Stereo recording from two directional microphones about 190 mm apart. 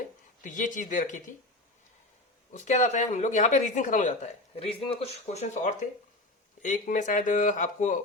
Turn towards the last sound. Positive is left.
turn(degrees=40)  # may be behind; listen again after turning